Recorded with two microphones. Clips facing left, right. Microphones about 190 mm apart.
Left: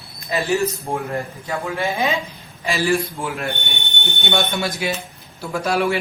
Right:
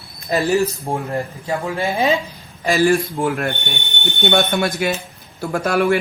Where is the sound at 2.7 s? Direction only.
50° right (ahead or behind).